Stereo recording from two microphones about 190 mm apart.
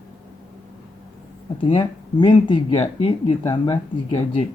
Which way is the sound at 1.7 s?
25° left (ahead or behind).